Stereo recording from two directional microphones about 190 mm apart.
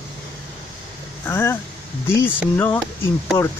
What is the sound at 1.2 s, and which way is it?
Speech, 15° left (ahead or behind).